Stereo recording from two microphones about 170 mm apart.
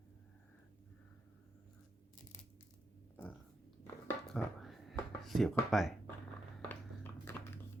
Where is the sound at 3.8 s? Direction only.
5° left (ahead or behind).